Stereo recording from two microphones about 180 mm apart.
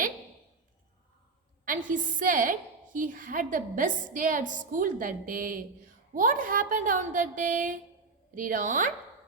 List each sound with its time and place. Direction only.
1.6 s a woman's voice: 45° right (ahead or behind)